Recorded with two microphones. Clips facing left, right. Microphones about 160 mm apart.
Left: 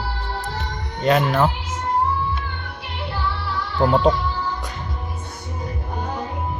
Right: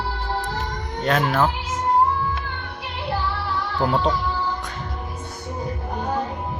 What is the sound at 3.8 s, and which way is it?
Speech, centre (ahead or behind).